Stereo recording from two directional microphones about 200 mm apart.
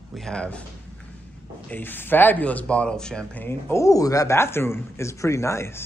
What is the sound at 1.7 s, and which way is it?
Speech, 10° left (ahead or behind).